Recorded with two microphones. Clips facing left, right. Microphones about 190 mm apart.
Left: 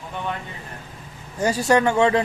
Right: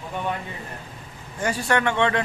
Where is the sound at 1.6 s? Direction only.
25° left (ahead or behind).